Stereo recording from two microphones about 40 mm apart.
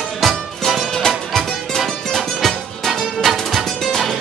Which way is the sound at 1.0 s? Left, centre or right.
Centre.